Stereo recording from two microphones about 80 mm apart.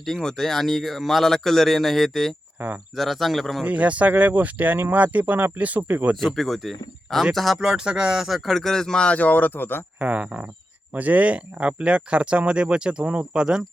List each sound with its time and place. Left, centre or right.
0.0 s speech: centre
2.6 s speech: centre
2.9 s speech: centre
3.6 s speech: centre
6.1 s speech: centre; by 9.8 s left
10.0 s speech: centre